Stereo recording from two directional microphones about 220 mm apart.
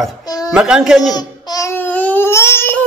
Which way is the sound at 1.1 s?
15° left (ahead or behind).